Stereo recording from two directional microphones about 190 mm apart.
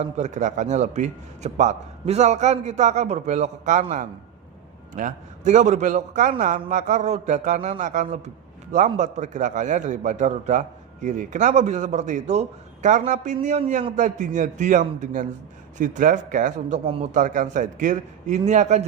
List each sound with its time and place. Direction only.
0.0 s a man's voice: 40° right (ahead or behind)
17.2 s a man's voice: 45° right (ahead or behind)